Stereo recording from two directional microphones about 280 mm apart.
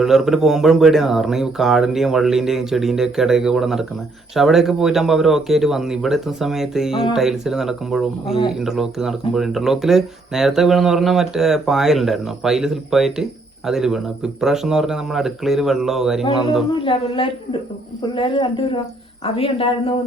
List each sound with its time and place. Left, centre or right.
0.0 s speech: centre
16.8 s a woman's voice: centre